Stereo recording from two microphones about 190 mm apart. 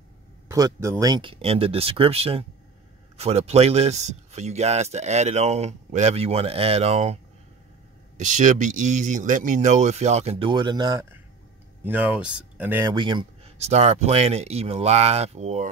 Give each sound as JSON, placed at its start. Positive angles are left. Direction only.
{"t": 0.5, "sound": "a man's voice", "side_deg": -15}
{"t": 8.2, "sound": "a man's voice", "side_deg": -40}
{"t": 12.9, "sound": "a man's voice", "side_deg": -25}